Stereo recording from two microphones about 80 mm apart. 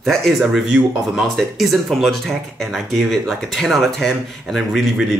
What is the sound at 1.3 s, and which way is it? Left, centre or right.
Speech, centre.